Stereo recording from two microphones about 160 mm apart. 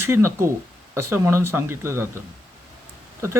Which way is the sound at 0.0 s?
15° right (ahead or behind).